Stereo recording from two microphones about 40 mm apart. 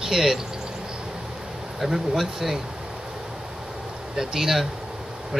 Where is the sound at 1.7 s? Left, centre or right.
Centre.